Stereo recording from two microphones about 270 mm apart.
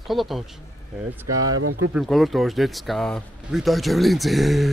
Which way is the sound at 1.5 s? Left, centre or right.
Right.